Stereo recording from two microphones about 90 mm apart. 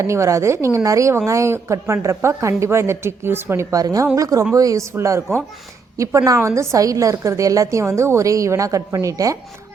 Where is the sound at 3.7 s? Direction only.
40° right (ahead or behind).